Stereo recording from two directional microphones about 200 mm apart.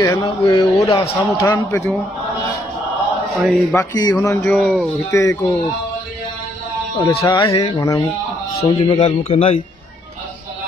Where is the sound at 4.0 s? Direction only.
20° left (ahead or behind); by 4.9 s centre (ahead or behind).